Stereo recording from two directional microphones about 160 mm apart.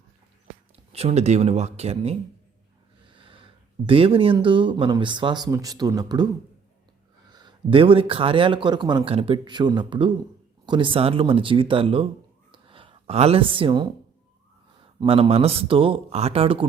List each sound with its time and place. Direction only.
0.9 s speech: 40° right (ahead or behind); by 6.2 s 25° right (ahead or behind)
7.3 s speech: 25° right (ahead or behind)
12.5 s a sound: 35° right (ahead or behind)
14.8 s speech: 35° right (ahead or behind)